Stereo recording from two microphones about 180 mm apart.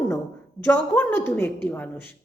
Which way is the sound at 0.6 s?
10° left (ahead or behind).